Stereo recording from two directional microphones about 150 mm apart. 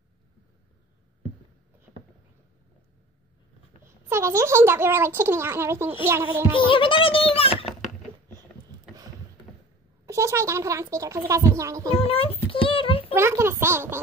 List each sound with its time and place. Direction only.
3.8 s speech: 20° right (ahead or behind)
6.5 s speech: 35° left (ahead or behind)
10.0 s speech: 20° right (ahead or behind)
11.9 s speech: 40° left (ahead or behind)
12.4 s a sound: 35° left (ahead or behind)
13.1 s speech: 15° right (ahead or behind)